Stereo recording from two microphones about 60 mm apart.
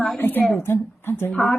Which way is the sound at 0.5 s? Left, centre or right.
Left.